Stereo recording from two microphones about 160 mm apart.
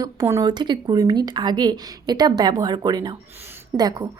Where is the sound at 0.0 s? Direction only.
20° right (ahead or behind).